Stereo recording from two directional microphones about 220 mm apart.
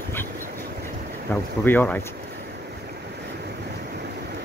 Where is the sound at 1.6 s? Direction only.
10° left (ahead or behind).